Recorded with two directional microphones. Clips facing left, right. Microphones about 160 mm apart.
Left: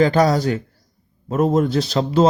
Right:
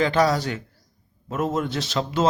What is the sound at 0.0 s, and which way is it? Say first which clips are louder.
Speech: left 5 dB; 40° left (ahead or behind).